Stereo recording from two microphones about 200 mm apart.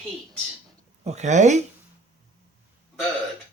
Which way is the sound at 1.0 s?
35° right (ahead or behind).